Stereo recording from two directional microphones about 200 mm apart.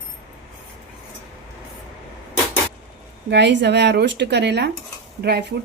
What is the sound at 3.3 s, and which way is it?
Speech, 60° right (ahead or behind).